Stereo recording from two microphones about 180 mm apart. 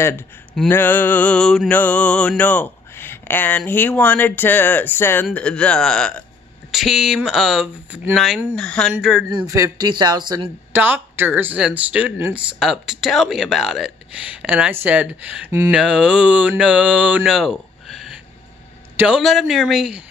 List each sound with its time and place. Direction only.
0.7 s music: 10° left (ahead or behind)
6.7 s speech: centre (ahead or behind)
9.3 s speech: 20° right (ahead or behind)
10.7 s speech: 10° right (ahead or behind)